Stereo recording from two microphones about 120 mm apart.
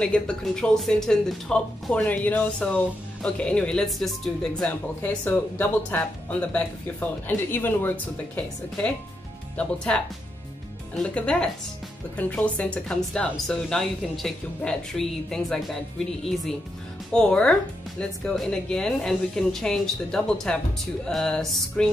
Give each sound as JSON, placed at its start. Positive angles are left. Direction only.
{"t": 0.0, "sound": "speech", "side_deg": 10}
{"t": 5.0, "sound": "a woman's voice", "side_deg": 15}
{"t": 17.1, "sound": "a woman's voice", "side_deg": 5}